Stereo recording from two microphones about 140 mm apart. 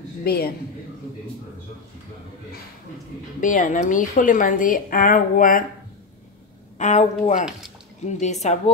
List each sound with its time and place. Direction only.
0.2 s a man's voice: 90° left
3.3 s a woman's voice: 65° left (ahead or behind)
6.8 s a woman's voice: 60° left (ahead or behind)